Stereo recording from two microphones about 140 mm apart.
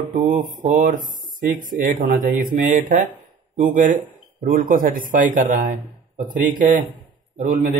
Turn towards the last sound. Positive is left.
turn(degrees=-60)  # may be behind; listen again after turning